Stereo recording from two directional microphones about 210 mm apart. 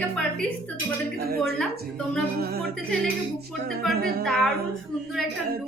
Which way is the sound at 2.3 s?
45° right (ahead or behind).